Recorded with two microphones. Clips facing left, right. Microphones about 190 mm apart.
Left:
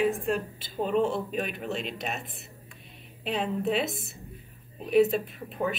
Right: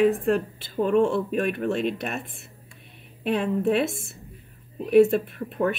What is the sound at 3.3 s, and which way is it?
Speech, 55° right (ahead or behind).